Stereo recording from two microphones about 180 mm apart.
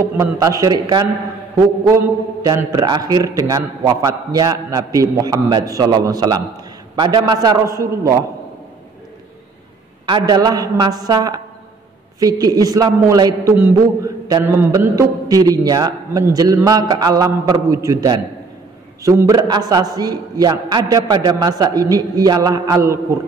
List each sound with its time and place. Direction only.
0.0 s a man's voice: 20° right (ahead or behind)
10.0 s a man's voice: 25° right (ahead or behind)